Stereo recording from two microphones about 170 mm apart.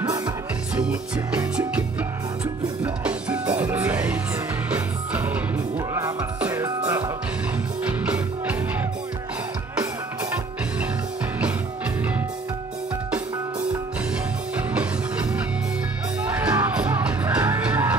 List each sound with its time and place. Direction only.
0.0 s music: 25° right (ahead or behind)
0.7 s music: 5° right (ahead or behind)
16.2 s music: 10° right (ahead or behind)